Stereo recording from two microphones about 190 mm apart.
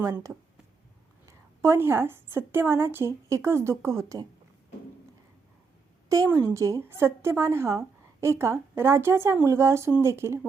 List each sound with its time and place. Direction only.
0.0 s a woman's voice: 20° right (ahead or behind)
6.1 s a woman's voice: 15° right (ahead or behind)